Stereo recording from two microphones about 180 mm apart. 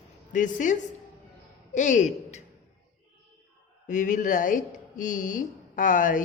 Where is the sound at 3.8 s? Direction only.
45° left (ahead or behind).